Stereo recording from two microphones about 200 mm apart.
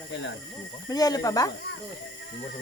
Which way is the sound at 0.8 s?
20° left (ahead or behind).